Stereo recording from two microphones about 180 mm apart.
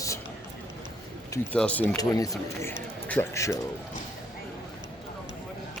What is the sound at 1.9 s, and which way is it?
Speech, 20° left (ahead or behind).